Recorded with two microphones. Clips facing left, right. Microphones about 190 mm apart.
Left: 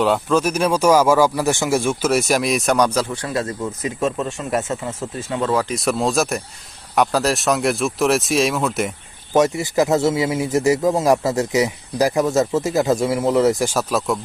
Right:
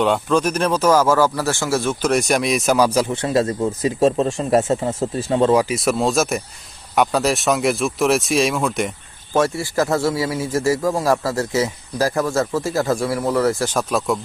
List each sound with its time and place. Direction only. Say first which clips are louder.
0.0 s speech: even; centre (ahead or behind)
3.1 s speech: right 5 dB; 25° right (ahead or behind)
5.6 s speech: right 1 dB; centre (ahead or behind)
9.3 s a man's voice: left 2 dB; 20° left (ahead or behind)
13.7 s speech: even; centre (ahead or behind)